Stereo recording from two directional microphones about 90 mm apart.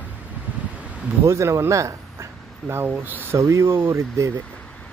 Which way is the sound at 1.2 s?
35° right (ahead or behind).